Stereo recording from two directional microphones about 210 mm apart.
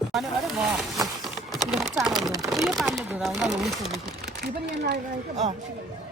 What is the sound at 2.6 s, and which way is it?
Speech, centre (ahead or behind).